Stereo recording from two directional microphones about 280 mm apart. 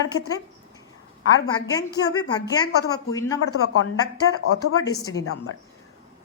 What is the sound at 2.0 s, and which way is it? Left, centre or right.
Speech, centre.